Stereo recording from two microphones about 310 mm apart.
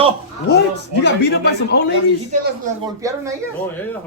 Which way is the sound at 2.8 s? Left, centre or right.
Centre.